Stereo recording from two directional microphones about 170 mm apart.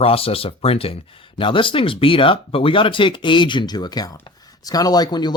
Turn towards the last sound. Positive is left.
turn(degrees=25)  # may be behind; listen again after turning